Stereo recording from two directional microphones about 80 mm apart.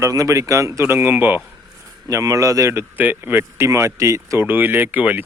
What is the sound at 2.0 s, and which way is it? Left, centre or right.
Speech, right.